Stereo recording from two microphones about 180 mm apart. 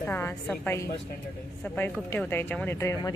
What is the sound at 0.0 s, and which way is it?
A woman's voice, 10° left (ahead or behind).